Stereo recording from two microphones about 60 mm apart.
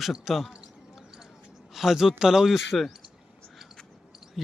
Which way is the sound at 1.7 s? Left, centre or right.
Centre.